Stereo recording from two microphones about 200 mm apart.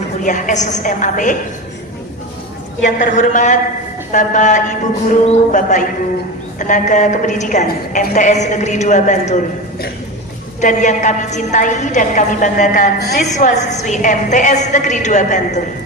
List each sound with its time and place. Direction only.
0.2 s a woman's voice: 40° left (ahead or behind)
3.0 s a woman's voice: 40° left (ahead or behind)
10.6 s a woman's voice: 35° left (ahead or behind)